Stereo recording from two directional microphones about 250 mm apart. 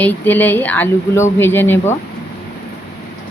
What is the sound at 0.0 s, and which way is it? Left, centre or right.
Speech, centre.